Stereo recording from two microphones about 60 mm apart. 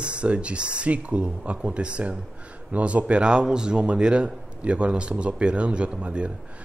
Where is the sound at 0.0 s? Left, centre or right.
Centre.